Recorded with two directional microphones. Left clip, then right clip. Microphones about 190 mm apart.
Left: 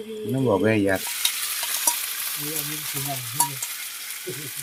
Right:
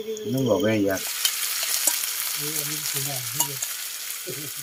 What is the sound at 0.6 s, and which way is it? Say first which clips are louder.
Frying: left 2 dB; 60° left (ahead or behind).